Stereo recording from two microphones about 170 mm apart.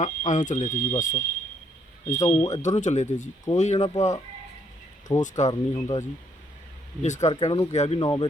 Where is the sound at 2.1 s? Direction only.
20° left (ahead or behind).